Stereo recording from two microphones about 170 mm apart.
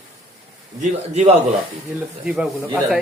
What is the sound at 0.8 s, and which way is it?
Speech, 40° right (ahead or behind).